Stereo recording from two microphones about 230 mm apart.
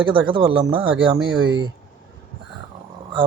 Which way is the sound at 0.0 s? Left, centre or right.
Right.